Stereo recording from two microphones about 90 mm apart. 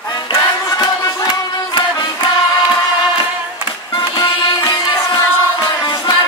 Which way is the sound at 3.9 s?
50° left (ahead or behind).